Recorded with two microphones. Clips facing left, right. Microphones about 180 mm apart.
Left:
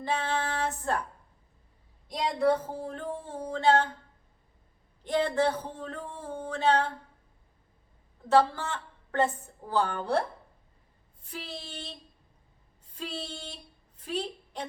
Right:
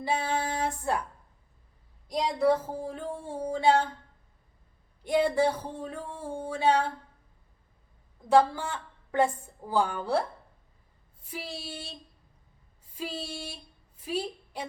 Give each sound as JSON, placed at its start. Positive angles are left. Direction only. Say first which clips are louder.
{"t": 0.0, "sound": "a woman's voice", "louder": "right 1 dB", "side_deg": -10}
{"t": 2.0, "sound": "a woman's voice", "louder": "right 1 dB", "side_deg": 0}
{"t": 5.0, "sound": "a woman's voice", "louder": "right 2 dB", "side_deg": -10}
{"t": 8.3, "sound": "a woman's voice", "louder": "right 1 dB", "side_deg": -10}